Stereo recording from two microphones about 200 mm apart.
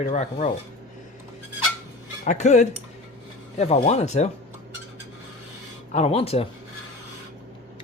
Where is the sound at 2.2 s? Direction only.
35° left (ahead or behind).